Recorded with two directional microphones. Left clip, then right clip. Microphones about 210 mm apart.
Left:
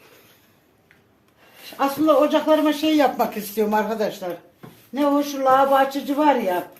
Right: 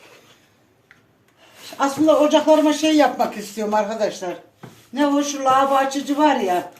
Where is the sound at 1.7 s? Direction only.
15° left (ahead or behind); by 4.0 s 30° left (ahead or behind).